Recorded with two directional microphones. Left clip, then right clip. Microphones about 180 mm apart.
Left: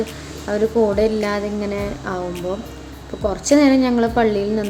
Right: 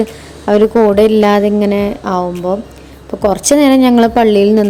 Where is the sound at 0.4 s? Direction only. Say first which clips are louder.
Right 9 dB; 50° right (ahead or behind).